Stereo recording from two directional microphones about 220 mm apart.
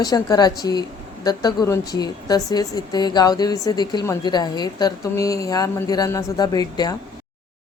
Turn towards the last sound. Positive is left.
turn(degrees=15)  # may be behind; listen again after turning